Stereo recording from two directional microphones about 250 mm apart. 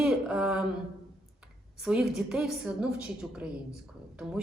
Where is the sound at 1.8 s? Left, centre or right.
Centre.